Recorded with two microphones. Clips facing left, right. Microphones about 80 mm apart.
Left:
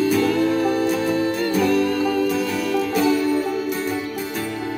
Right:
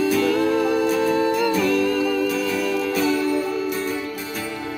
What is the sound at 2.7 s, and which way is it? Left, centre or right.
Music, centre.